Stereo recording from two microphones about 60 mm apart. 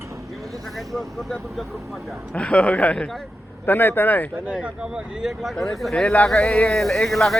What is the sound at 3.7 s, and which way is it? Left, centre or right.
Speech, left.